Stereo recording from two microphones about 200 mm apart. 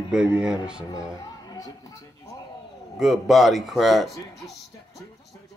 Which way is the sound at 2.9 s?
Centre (ahead or behind).